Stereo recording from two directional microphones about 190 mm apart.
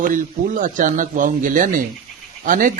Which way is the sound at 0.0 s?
45° right (ahead or behind).